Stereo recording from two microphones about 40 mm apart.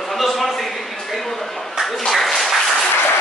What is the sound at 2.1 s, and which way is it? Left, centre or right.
Applause, centre.